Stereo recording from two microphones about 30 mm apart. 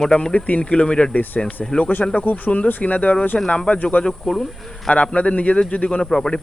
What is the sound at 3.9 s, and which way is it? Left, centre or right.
Speech, left.